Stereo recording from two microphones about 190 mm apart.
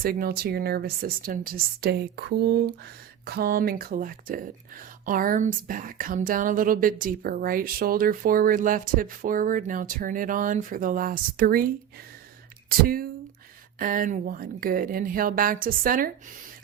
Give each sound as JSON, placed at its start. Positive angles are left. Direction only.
{"t": 0.0, "sound": "a woman's voice", "side_deg": -50}